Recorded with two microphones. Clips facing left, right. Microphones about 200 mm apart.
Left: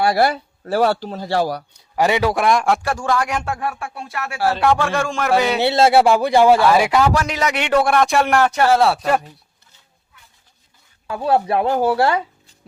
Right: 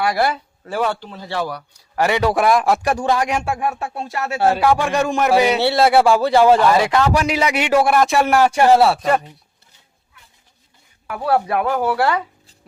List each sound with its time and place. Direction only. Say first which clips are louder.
0.0 s a man's voice: left 2 dB; 35° left (ahead or behind)
1.7 s a man's voice: right 1 dB; 20° left (ahead or behind)
2.2 s a man's voice: right 1 dB; centre (ahead or behind)
2.8 s a man's voice: right 2 dB; 20° right (ahead or behind)
4.5 s a man's voice: right 1 dB; 10° right (ahead or behind)
5.5 s speech: even; 20° left (ahead or behind)
7.1 s a man's voice: right 2 dB; 10° right (ahead or behind)
8.8 s a man's voice: right 1 dB; centre (ahead or behind)
11.0 s speech: left 1 dB; 25° left (ahead or behind)